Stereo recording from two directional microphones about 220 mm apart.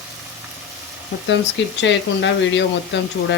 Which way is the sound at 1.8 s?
55° left (ahead or behind).